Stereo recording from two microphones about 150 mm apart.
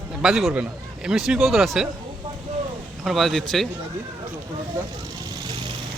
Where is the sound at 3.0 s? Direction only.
Centre (ahead or behind).